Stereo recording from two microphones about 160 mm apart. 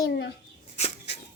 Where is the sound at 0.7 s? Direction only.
40° left (ahead or behind).